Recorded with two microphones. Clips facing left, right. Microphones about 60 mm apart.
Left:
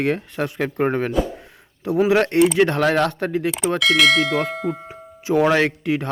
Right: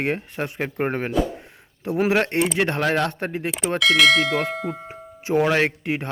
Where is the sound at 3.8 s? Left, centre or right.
Centre.